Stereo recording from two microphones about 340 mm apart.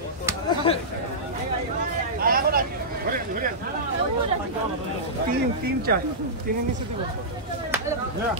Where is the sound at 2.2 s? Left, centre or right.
Right.